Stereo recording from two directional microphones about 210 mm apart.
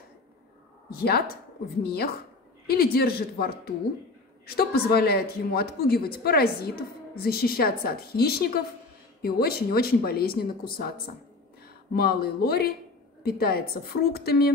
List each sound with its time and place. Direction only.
0.8 s speech: 45° left (ahead or behind)